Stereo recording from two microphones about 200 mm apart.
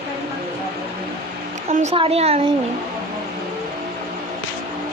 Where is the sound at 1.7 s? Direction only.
40° right (ahead or behind).